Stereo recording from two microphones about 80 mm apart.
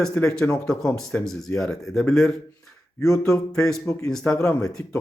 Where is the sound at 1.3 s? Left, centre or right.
Centre.